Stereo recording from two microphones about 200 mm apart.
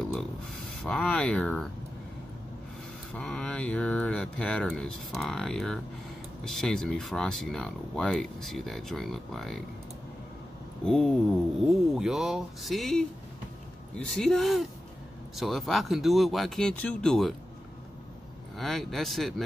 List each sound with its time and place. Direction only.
0.8 s speech: 5° left (ahead or behind)
3.2 s speech: 5° left (ahead or behind)
10.9 s speech: 5° left (ahead or behind)
18.6 s speech: centre (ahead or behind)